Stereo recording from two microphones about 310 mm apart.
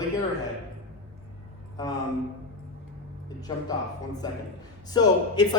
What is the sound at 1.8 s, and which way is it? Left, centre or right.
Speech, centre.